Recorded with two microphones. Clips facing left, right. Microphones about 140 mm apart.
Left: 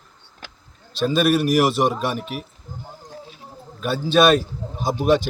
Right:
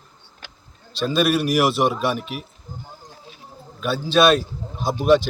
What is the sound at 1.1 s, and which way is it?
Speech, 45° left (ahead or behind).